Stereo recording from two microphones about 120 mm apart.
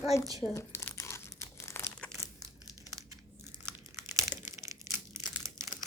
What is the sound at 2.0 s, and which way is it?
Crumpling, 10° left (ahead or behind).